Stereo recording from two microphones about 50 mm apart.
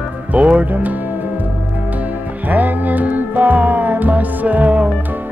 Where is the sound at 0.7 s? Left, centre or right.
Right.